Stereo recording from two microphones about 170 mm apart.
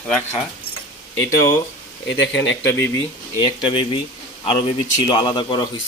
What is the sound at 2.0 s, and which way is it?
Speech, 90° left.